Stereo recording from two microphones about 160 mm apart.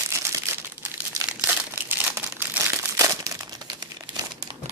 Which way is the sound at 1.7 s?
10° right (ahead or behind).